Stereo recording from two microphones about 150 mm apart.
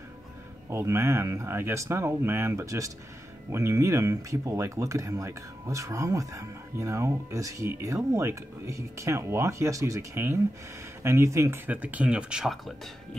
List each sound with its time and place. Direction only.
0.7 s speech: 20° right (ahead or behind); by 12.7 s centre (ahead or behind)